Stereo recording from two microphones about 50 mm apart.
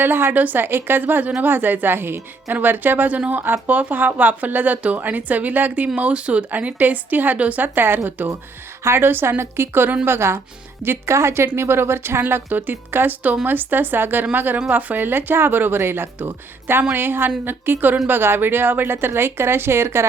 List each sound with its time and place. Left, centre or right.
0.0 s a woman's voice: right
7.6 s a woman's voice: right
8.8 s speech: right
12.2 s a woman's voice: right